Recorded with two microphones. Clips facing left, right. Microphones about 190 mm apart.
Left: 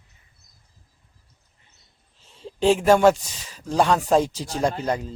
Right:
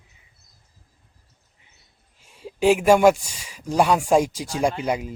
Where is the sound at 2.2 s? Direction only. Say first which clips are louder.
Right 1 dB; 10° right (ahead or behind).